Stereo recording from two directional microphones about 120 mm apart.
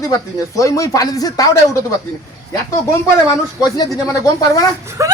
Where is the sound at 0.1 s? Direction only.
30° left (ahead or behind).